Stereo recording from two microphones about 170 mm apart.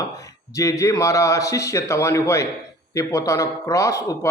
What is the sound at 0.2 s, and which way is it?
A man's voice, 20° left (ahead or behind).